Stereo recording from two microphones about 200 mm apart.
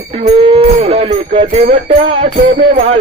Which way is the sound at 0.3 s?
30° right (ahead or behind).